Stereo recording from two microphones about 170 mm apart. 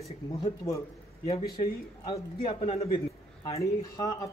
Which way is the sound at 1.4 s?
60° left (ahead or behind).